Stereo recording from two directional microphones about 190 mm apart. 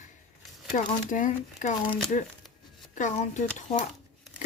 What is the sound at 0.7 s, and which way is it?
Speech, 40° left (ahead or behind).